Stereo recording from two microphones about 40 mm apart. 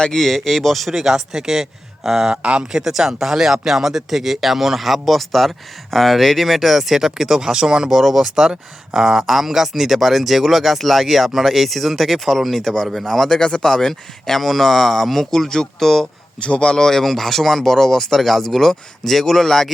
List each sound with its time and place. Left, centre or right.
0.2 s speech: centre
0.9 s speech: centre
16.4 s speech: left; by 19.7 s centre